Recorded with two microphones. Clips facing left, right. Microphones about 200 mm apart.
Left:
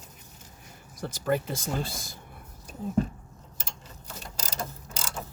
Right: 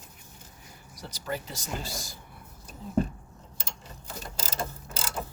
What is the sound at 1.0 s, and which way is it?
Speech, 50° left (ahead or behind).